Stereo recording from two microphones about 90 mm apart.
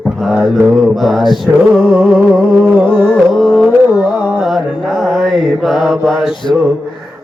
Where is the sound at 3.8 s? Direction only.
15° right (ahead or behind).